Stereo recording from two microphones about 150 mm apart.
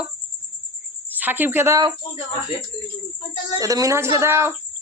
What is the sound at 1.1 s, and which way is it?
Speech, 10° right (ahead or behind).